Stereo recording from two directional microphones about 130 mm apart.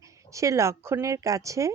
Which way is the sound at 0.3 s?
25° right (ahead or behind).